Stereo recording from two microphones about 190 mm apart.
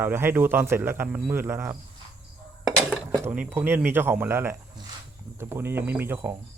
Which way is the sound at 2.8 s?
Centre (ahead or behind).